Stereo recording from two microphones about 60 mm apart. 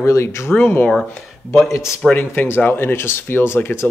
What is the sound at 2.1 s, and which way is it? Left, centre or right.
Speech, left.